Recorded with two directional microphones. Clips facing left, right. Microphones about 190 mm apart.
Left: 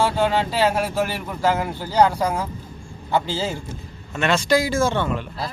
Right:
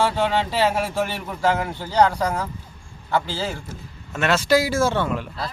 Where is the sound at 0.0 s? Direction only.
Centre (ahead or behind).